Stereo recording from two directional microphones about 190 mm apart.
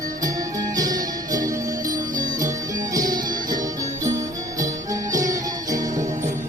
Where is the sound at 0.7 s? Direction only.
20° right (ahead or behind).